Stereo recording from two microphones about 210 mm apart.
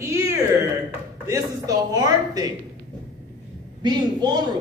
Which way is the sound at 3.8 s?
20° right (ahead or behind).